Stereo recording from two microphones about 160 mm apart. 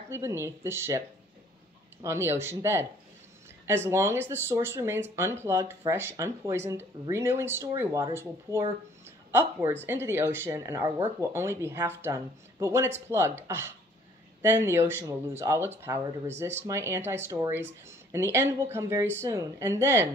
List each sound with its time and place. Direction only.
0.1 s speech: 15° right (ahead or behind)
2.0 s speech: 15° right (ahead or behind)